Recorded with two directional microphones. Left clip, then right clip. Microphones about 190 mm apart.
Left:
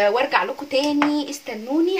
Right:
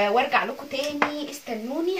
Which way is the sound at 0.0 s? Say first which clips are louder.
Left 3 dB; 65° left (ahead or behind).